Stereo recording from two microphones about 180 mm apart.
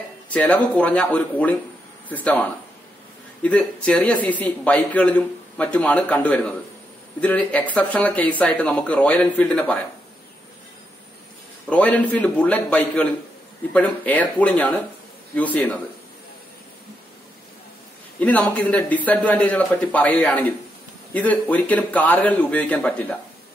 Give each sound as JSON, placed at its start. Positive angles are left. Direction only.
{"t": 0.3, "sound": "speech", "side_deg": 5}
{"t": 3.4, "sound": "speech", "side_deg": 5}
{"t": 11.7, "sound": "speech", "side_deg": 10}
{"t": 18.2, "sound": "speech", "side_deg": 10}